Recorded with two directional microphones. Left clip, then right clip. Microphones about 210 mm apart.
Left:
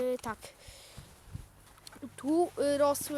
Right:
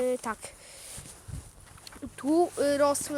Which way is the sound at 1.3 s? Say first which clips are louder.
Right 3 dB; 50° right (ahead or behind).